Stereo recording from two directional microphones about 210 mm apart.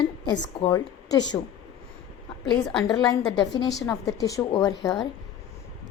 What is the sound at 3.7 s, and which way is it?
Speech, centre (ahead or behind).